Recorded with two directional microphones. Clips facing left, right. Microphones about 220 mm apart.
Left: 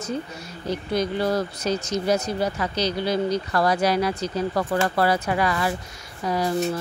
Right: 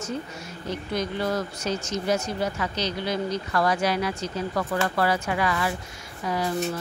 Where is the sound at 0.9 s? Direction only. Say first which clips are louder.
Left 4 dB; 35° left (ahead or behind).